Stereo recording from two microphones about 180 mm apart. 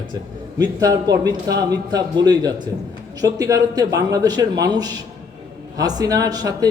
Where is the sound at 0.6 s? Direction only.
20° right (ahead or behind).